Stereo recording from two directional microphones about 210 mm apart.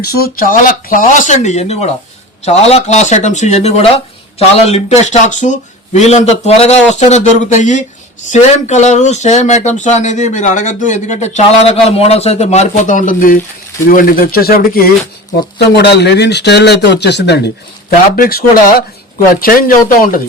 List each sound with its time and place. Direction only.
0.0 s speech: 45° left (ahead or behind)